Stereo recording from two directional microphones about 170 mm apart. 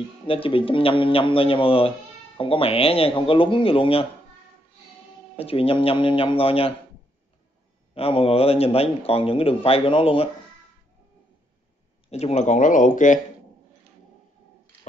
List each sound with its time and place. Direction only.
0.3 s speech: 30° left (ahead or behind)
5.3 s speech: 35° left (ahead or behind)
7.9 s speech: 35° left (ahead or behind)
12.1 s speech: 40° left (ahead or behind)